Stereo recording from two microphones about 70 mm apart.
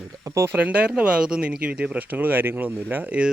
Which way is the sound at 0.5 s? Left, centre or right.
Centre.